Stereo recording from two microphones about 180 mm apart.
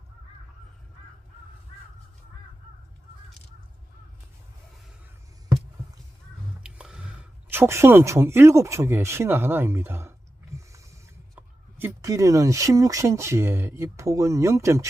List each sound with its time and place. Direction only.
6.6 s a sound: 5° right (ahead or behind)
7.5 s speech: 15° right (ahead or behind)
11.3 s speech: 15° right (ahead or behind)